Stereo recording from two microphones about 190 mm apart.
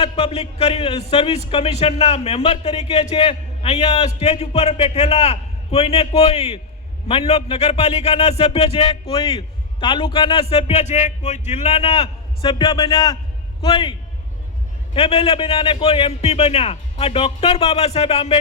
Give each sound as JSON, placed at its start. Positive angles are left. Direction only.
{"t": 0.0, "sound": "a man's voice", "side_deg": 30}
{"t": 14.9, "sound": "a man's voice", "side_deg": 30}